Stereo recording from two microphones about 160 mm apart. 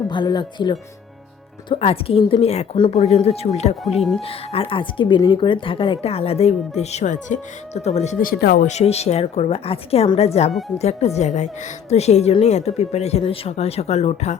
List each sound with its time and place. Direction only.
0.1 s speech: 30° left (ahead or behind)
1.7 s a woman's voice: 40° left (ahead or behind)
8.3 s speech: 70° left (ahead or behind)
8.6 s a woman's voice: 45° left (ahead or behind)